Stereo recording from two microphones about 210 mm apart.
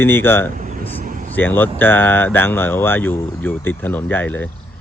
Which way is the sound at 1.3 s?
10° left (ahead or behind).